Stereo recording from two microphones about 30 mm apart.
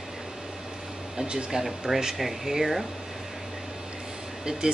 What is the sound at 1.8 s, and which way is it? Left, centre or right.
Speech, centre.